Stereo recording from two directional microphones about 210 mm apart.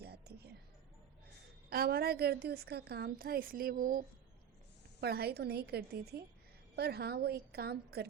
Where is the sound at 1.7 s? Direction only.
45° right (ahead or behind).